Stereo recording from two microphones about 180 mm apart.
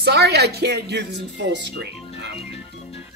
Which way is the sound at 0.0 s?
65° right (ahead or behind).